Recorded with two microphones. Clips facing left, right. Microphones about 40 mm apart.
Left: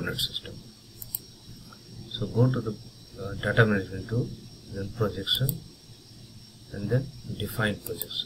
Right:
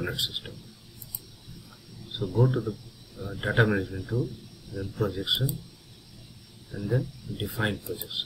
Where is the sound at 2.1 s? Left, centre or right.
Centre.